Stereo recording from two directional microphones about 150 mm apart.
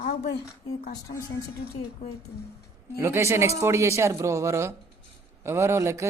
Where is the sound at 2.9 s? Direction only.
20° right (ahead or behind).